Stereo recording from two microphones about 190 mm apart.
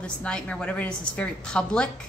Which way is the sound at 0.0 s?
5° left (ahead or behind).